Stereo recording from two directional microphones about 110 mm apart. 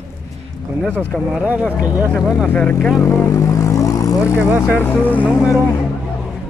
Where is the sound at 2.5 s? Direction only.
15° left (ahead or behind).